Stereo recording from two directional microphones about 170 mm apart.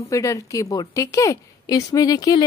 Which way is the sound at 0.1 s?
20° left (ahead or behind).